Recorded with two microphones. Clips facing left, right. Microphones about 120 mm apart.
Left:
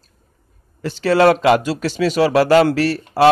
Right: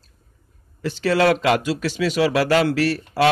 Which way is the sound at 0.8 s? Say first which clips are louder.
Left 4 dB; 35° left (ahead or behind).